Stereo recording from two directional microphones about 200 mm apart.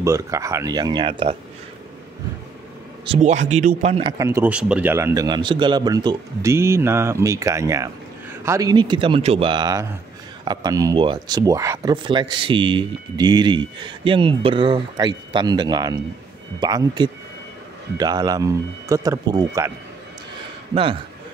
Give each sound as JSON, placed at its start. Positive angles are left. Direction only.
{"t": 0.0, "sound": "a man's voice", "side_deg": -15}
{"t": 3.1, "sound": "speech", "side_deg": -35}
{"t": 4.2, "sound": "a man's voice", "side_deg": -10}
{"t": 20.7, "sound": "speech", "side_deg": -25}